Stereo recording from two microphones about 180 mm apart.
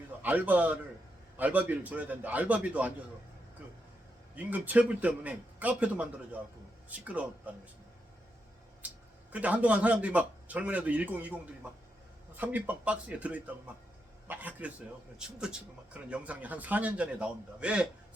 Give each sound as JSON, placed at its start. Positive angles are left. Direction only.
{"t": 0.2, "sound": "a man's voice", "side_deg": -10}
{"t": 3.6, "sound": "vehicle", "side_deg": -10}
{"t": 4.4, "sound": "a man's voice", "side_deg": -10}
{"t": 8.8, "sound": "a sound", "side_deg": -10}
{"t": 9.3, "sound": "a man's voice", "side_deg": -10}